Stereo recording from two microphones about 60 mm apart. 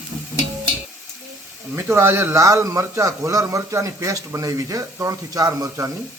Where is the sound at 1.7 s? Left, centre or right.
Right.